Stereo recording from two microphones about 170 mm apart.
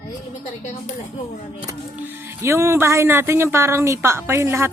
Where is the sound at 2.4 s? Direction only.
15° right (ahead or behind).